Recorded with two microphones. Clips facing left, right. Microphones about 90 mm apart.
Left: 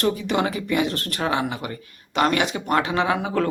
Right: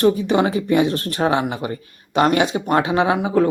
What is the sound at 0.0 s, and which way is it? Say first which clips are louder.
Speech: right 6 dB; 20° right (ahead or behind).